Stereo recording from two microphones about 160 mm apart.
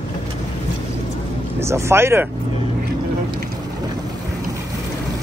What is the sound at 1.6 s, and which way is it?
Speech, 15° right (ahead or behind).